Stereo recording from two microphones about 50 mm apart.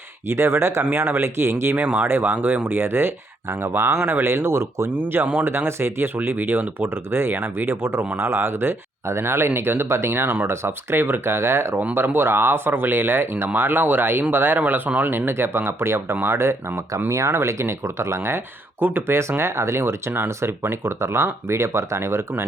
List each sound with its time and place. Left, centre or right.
0.3 s speech: right
1.7 s speech: right
2.0 s speech: right
4.9 s speech: right
15.1 s speech: right
17.1 s speech: right
18.8 s speech: right
19.4 s speech: right